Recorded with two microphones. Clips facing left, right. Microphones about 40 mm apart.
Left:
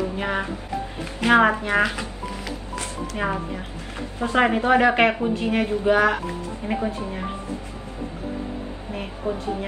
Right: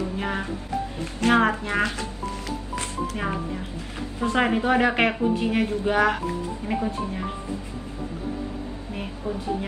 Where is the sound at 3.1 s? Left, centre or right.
Centre.